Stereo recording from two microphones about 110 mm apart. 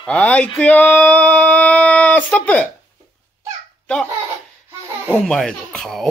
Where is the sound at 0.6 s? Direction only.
15° left (ahead or behind).